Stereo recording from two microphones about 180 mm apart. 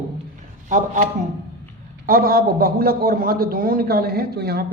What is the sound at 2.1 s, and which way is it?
A man's voice, 55° right (ahead or behind).